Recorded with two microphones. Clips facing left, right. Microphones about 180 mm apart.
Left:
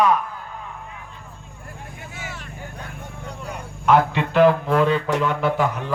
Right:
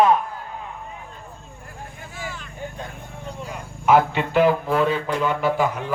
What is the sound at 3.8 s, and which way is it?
A man's voice, 5° right (ahead or behind).